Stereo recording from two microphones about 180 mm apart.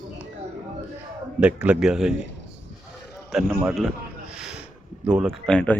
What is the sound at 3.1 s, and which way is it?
A man's voice, 5° right (ahead or behind).